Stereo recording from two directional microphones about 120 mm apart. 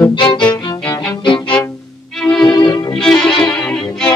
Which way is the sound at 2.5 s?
35° left (ahead or behind).